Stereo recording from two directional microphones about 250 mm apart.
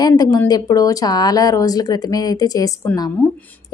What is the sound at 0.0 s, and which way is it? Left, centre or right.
A woman's voice, centre.